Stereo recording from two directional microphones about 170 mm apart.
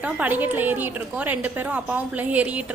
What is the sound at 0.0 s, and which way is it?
A woman's voice, 10° right (ahead or behind).